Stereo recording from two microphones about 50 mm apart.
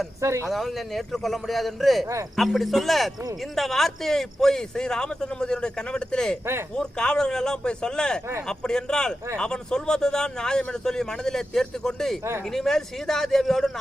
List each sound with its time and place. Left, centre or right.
0.2 s speech: right
0.4 s a man's voice: centre
6.4 s speech: right
6.7 s a man's voice: centre